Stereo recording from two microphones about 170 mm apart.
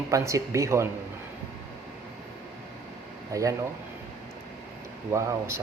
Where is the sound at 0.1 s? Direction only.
20° right (ahead or behind).